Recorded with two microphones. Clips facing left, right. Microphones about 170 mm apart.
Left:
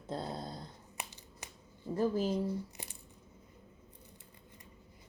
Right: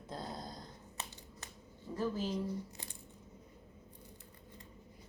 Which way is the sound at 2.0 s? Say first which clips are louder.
Left 5 dB; 40° left (ahead or behind).